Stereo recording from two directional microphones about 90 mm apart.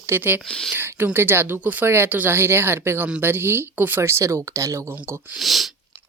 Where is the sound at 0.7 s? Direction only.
25° right (ahead or behind).